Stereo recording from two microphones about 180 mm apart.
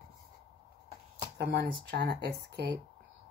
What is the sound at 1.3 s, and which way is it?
Speech, 65° right (ahead or behind).